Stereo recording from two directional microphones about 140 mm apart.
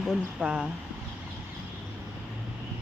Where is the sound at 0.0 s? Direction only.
5° right (ahead or behind).